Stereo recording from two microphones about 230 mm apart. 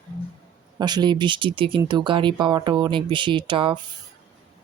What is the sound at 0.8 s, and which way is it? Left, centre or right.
Speech, centre.